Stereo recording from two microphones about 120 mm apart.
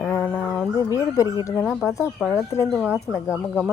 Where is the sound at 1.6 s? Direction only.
5° right (ahead or behind).